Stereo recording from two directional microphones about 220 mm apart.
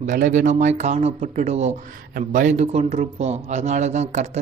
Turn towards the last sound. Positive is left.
turn(degrees=-30)  # may be behind; listen again after turning